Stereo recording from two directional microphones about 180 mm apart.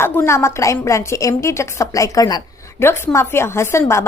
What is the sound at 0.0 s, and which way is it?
A woman's voice, 10° left (ahead or behind).